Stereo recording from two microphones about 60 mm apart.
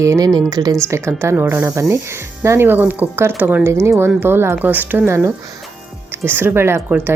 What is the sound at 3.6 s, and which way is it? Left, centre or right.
A woman's voice, right.